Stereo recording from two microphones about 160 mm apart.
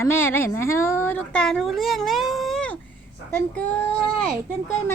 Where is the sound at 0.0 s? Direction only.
15° left (ahead or behind).